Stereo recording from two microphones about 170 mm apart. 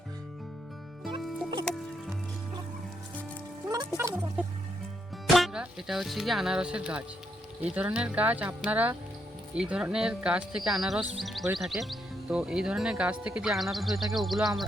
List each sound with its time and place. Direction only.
1.2 s music: centre (ahead or behind)
3.7 s music: 20° right (ahead or behind)
5.2 s speech: centre (ahead or behind)